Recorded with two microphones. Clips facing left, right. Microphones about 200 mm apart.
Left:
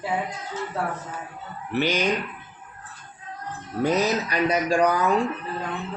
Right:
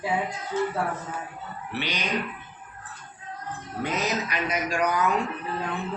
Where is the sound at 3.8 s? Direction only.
35° left (ahead or behind).